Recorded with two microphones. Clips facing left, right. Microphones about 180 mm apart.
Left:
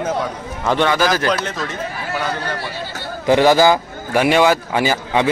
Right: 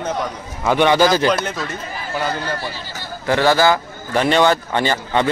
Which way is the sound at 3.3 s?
15° left (ahead or behind).